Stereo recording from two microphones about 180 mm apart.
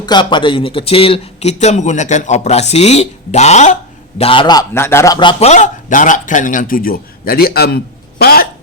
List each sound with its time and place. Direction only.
0.0 s a man's voice: 25° left (ahead or behind); by 3.8 s 40° left (ahead or behind)
4.2 s a man's voice: 30° left (ahead or behind); by 7.8 s 60° left (ahead or behind)
8.2 s a sound: 55° left (ahead or behind)